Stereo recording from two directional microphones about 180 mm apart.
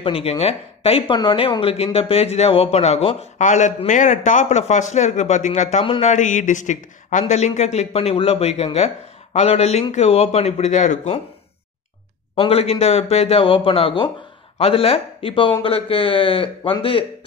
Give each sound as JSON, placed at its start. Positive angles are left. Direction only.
{"t": 0.0, "sound": "speech", "side_deg": 30}
{"t": 12.4, "sound": "speech", "side_deg": 35}